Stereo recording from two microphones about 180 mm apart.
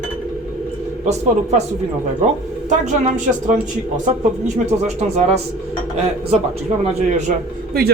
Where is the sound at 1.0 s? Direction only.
40° right (ahead or behind).